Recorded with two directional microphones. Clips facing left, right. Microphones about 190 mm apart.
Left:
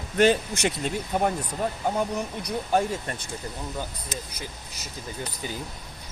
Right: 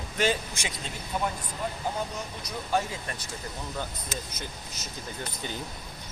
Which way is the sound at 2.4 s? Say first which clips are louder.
Left 4 dB; 50° left (ahead or behind).